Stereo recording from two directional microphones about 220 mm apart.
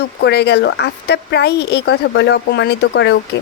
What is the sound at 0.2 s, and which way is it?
Speech, 50° left (ahead or behind).